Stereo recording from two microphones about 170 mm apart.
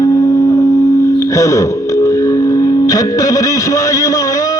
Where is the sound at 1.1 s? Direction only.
15° left (ahead or behind).